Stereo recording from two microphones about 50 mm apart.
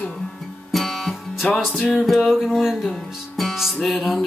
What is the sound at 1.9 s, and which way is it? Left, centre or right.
Mantra, centre.